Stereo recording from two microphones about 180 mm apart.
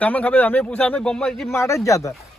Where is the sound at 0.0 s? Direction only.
10° left (ahead or behind).